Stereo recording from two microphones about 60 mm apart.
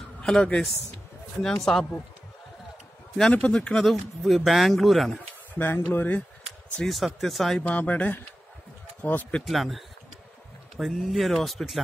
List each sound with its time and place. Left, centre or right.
0.2 s a sound: centre
1.4 s speech: centre
3.3 s speech: centre
3.9 s speech: centre
5.5 s speech: left
6.9 s speech: centre
7.6 s speech: left
9.5 s speech: centre